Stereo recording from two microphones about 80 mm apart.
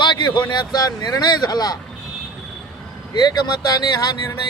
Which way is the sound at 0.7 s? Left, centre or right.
Left.